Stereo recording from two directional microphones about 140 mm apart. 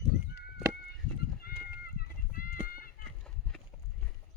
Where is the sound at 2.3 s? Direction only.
90° left.